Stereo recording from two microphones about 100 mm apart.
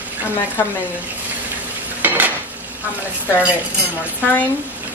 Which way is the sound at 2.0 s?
20° right (ahead or behind).